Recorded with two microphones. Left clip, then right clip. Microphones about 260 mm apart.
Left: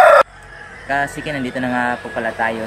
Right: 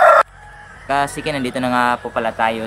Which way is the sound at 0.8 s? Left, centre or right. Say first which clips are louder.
Right 1 dB; centre.